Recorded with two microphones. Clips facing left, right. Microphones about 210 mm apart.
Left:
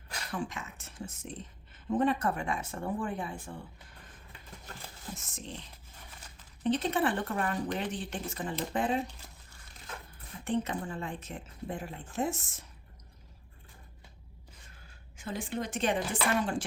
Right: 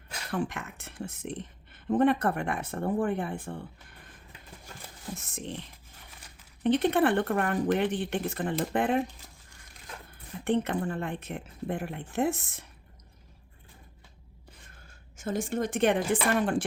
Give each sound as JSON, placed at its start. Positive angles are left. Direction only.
{"t": 0.3, "sound": "a woman's voice", "side_deg": -60}
{"t": 5.1, "sound": "a woman's voice", "side_deg": -60}
{"t": 6.6, "sound": "a woman's voice", "side_deg": -60}
{"t": 10.4, "sound": "a woman's voice", "side_deg": -60}
{"t": 14.8, "sound": "a woman's voice", "side_deg": -45}